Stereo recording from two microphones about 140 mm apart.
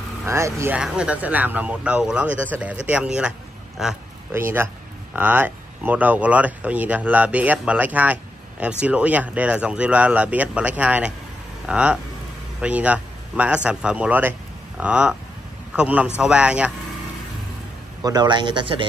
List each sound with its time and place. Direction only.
0.2 s speech: 20° right (ahead or behind)
0.7 s a man's voice: 5° right (ahead or behind)
4.3 s a man's voice: 15° right (ahead or behind)
18.0 s speech: 30° right (ahead or behind)